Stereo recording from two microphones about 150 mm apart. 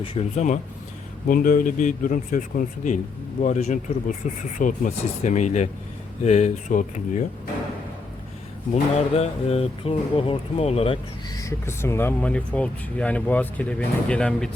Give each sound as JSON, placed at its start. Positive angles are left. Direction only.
{"t": 0.0, "sound": "speech", "side_deg": 40}
{"t": 1.3, "sound": "speech", "side_deg": 65}
{"t": 8.7, "sound": "speech", "side_deg": 45}
{"t": 11.3, "sound": "speech", "side_deg": 20}